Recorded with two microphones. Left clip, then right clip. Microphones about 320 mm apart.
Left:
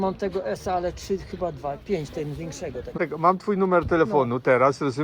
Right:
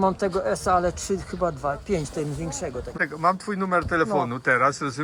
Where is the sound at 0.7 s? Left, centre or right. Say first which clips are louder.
Right 5 dB; right.